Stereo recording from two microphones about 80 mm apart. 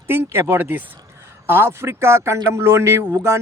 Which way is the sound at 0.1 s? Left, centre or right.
Right.